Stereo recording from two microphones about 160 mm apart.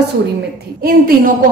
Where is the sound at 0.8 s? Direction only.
65° right (ahead or behind).